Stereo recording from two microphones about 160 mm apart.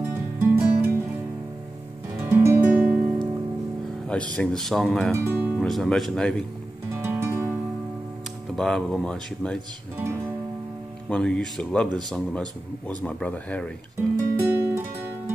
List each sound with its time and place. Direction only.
0.0 s music: 15° right (ahead or behind)
2.2 s guitar: 15° right (ahead or behind)
4.1 s speech: 5° left (ahead or behind)
5.1 s speech: 15° right (ahead or behind)
5.6 s speech: 5° left (ahead or behind)
6.9 s music: 15° right (ahead or behind)
8.5 s speech: 5° left (ahead or behind)
11.1 s a man's voice: 5° left (ahead or behind)
14.1 s music: 15° right (ahead or behind)